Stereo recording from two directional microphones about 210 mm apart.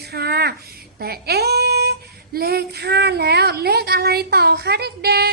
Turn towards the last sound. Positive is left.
turn(degrees=-50)  # may be behind; listen again after turning